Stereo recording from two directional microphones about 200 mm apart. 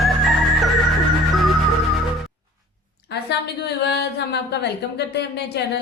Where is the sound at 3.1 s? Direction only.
55° left (ahead or behind).